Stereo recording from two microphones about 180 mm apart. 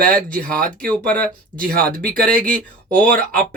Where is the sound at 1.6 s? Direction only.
55° right (ahead or behind).